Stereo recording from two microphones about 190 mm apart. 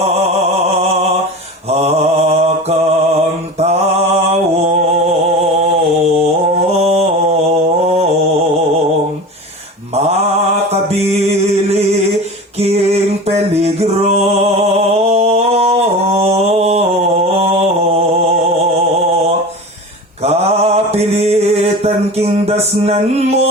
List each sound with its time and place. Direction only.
1.7 s mantra: 35° right (ahead or behind)
6.7 s mantra: 35° right (ahead or behind)
9.9 s mantra: 35° right (ahead or behind)
12.5 s a sound: 35° right (ahead or behind)
13.2 s music: 35° right (ahead or behind)
14.9 s mantra: 35° right (ahead or behind)
20.2 s mantra: 35° right (ahead or behind)